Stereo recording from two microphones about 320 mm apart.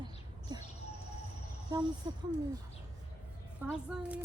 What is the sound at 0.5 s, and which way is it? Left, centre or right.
Bird, centre.